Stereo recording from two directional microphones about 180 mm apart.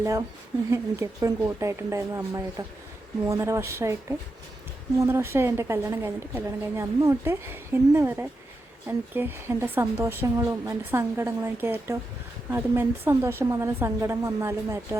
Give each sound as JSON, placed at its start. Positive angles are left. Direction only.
{"t": 0.0, "sound": "a woman's voice", "side_deg": -15}
{"t": 4.9, "sound": "a woman's voice", "side_deg": -15}